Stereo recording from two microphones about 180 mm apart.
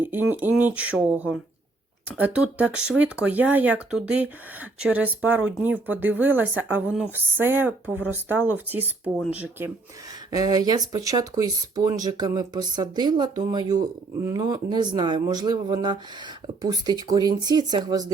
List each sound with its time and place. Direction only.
0.0 s speech: 10° right (ahead or behind)
10.3 s speech: 20° right (ahead or behind)